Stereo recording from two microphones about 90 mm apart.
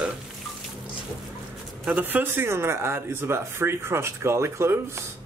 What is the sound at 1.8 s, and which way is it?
Speech, 15° right (ahead or behind).